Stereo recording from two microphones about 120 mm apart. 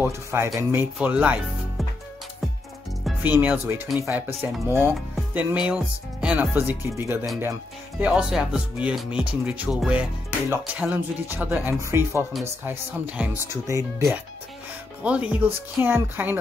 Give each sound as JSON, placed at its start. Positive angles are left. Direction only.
{"t": 0.0, "sound": "speech", "side_deg": -20}
{"t": 3.2, "sound": "speech", "side_deg": -15}
{"t": 8.0, "sound": "speech", "side_deg": -5}
{"t": 10.5, "sound": "speech", "side_deg": -15}
{"t": 15.0, "sound": "speech", "side_deg": -10}